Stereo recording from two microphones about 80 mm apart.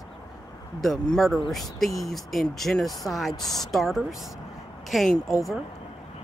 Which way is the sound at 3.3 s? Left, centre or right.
Left.